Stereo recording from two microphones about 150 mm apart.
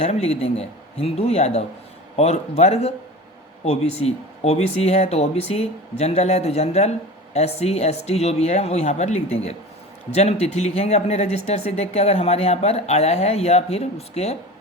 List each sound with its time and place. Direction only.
0.0 s speech: 45° left (ahead or behind)